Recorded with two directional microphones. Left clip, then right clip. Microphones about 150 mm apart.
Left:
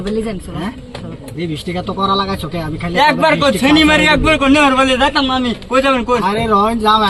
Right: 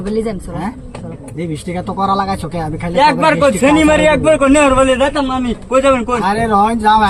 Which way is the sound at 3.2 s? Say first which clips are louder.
Right 1 dB; 25° right (ahead or behind).